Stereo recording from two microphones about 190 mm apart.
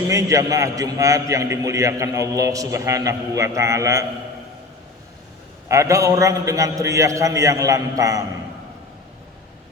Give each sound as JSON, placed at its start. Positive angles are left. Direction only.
{"t": 0.1, "sound": "a man's voice", "side_deg": -15}
{"t": 5.6, "sound": "a man's voice", "side_deg": -15}